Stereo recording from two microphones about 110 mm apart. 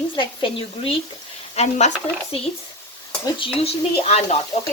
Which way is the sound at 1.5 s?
85° left.